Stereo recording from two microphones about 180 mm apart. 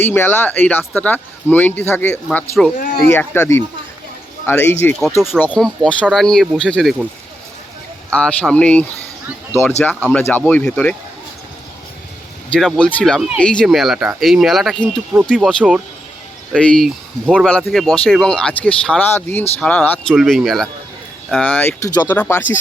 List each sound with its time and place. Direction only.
0.0 s speech: 10° left (ahead or behind)
2.3 s speech: centre (ahead or behind)
2.7 s speech: 50° left (ahead or behind)
3.1 s speech: 10° left (ahead or behind)
8.1 s speech: 5° left (ahead or behind)
12.5 s speech: 5° left (ahead or behind)